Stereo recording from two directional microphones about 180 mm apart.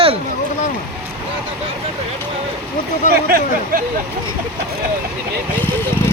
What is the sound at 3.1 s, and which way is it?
Speech, 60° right (ahead or behind).